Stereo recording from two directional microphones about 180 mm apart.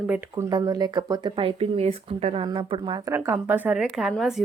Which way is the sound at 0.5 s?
20° right (ahead or behind).